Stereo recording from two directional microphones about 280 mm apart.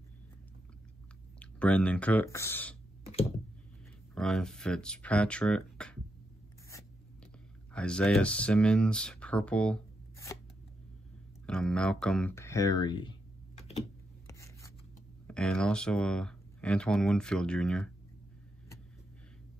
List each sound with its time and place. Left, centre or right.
1.4 s speech: centre
4.1 s speech: centre
7.7 s speech: centre
11.4 s speech: centre
13.6 s a sound: left
14.2 s rub: centre
15.2 s speech: centre